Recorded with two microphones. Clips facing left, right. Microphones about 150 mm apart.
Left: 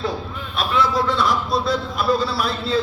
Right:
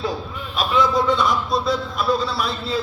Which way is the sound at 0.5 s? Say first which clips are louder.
Right 1 dB; centre (ahead or behind).